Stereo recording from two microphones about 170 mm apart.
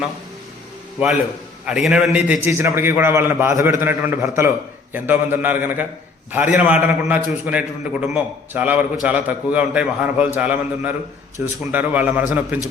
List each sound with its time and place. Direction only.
1.6 s a man's voice: 5° right (ahead or behind)